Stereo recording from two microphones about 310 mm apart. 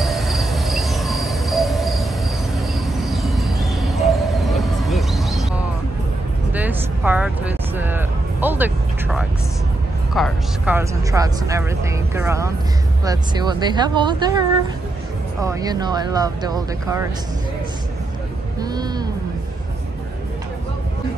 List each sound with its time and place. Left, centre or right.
0.0 s cricket: centre
2.9 s a sound: centre
6.5 s music: centre
10.1 s speech: centre
15.4 s speech: centre
18.6 s vehicle: centre